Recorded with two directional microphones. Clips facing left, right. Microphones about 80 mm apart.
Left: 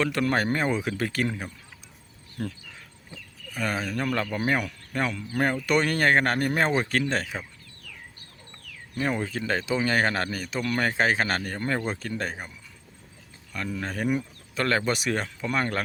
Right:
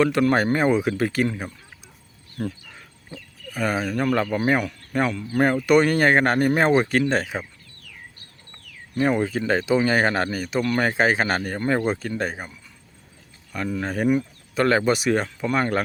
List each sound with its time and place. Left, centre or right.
0.0 s speech: centre
2.4 s speech: centre
9.0 s speech: centre
13.5 s speech: centre
14.1 s bird: centre
14.6 s speech: centre